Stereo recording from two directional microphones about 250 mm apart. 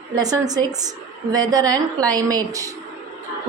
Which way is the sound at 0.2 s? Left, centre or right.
Centre.